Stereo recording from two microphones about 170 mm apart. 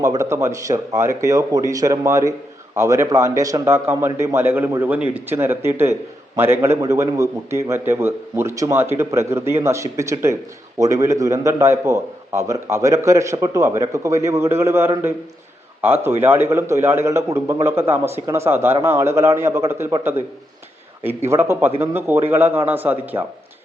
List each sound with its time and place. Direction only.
0.0 s a man's voice: 15° right (ahead or behind)
21.2 s a man's voice: 15° right (ahead or behind)